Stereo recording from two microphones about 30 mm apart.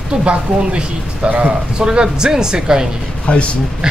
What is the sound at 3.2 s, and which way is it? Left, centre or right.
Speech, left.